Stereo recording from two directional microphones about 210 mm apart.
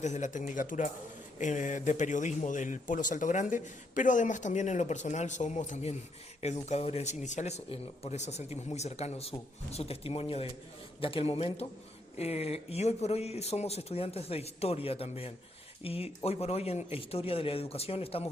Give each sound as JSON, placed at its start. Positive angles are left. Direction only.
{"t": 0.0, "sound": "speech", "side_deg": 35}